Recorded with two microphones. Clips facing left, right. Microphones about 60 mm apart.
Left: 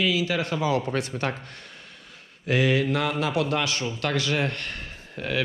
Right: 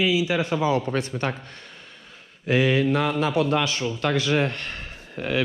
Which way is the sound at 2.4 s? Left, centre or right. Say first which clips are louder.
Right 2 dB; right.